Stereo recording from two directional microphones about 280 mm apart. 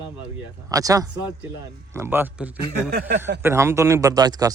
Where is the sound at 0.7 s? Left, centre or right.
Centre.